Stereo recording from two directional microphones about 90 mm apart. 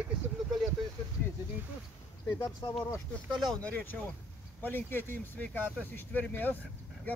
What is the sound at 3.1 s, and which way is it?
Speech, 15° left (ahead or behind).